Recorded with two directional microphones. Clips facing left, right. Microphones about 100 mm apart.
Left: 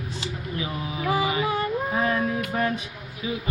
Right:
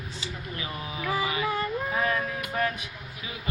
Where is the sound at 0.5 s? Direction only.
15° left (ahead or behind).